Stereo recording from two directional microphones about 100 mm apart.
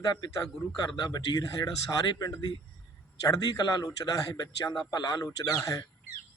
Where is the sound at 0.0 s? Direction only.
40° left (ahead or behind).